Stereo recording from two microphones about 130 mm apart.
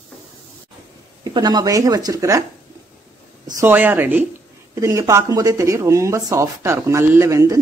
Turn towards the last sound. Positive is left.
turn(degrees=-25)  # may be behind; listen again after turning